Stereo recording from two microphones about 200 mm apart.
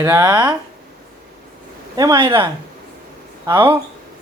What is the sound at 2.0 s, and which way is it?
Speech, 20° right (ahead or behind).